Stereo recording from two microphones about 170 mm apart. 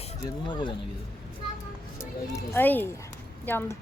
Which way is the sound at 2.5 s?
10° left (ahead or behind).